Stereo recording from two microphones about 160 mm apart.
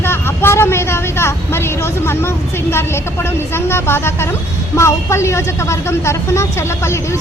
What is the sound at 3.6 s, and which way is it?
A woman's voice, 15° left (ahead or behind).